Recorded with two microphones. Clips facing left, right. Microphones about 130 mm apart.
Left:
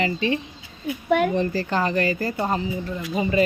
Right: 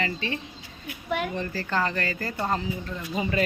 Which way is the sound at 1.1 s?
50° left (ahead or behind).